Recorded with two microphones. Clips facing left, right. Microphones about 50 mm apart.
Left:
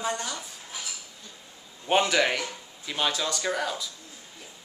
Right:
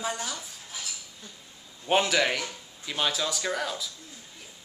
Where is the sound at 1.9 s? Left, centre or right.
Centre.